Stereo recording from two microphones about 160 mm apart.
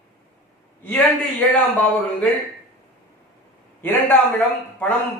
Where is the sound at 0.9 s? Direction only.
10° left (ahead or behind).